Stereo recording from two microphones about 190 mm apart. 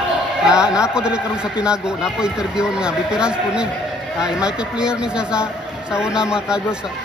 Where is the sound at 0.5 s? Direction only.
5° right (ahead or behind).